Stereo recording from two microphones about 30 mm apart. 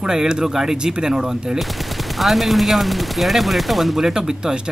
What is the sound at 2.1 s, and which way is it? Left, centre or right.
Speech, centre.